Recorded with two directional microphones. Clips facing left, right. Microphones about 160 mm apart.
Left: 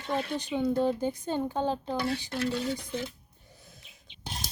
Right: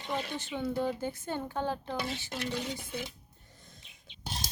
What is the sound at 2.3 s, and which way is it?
Speech, 20° right (ahead or behind).